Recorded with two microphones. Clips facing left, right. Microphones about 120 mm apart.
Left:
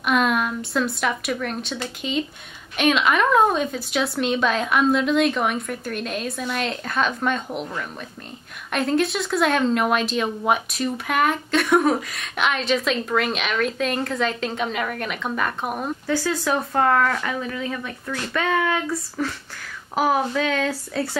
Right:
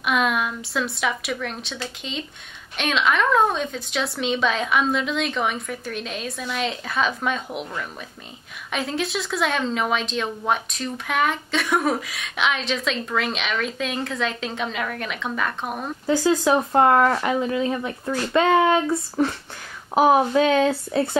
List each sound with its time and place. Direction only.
0.0 s speech: centre (ahead or behind)
16.1 s speech: 20° right (ahead or behind)